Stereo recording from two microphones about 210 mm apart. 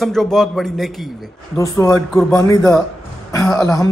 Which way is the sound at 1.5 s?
15° left (ahead or behind).